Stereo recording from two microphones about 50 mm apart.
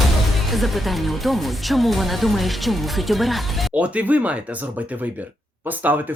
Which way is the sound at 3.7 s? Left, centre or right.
Right.